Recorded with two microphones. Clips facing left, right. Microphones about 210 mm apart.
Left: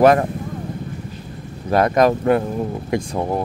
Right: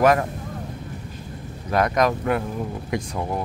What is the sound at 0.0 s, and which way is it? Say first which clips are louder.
Speech: left 5 dB; 30° left (ahead or behind).